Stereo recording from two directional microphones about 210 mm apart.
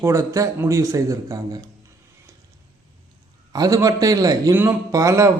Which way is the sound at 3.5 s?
15° right (ahead or behind).